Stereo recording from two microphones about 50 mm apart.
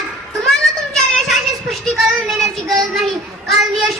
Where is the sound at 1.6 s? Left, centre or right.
Centre.